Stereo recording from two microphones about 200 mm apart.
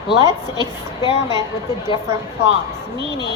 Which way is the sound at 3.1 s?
20° left (ahead or behind).